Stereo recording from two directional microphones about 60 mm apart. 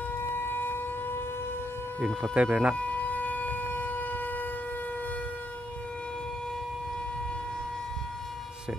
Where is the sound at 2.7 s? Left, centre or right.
Left.